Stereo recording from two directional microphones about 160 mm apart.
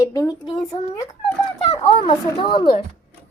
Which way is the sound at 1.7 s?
35° left (ahead or behind).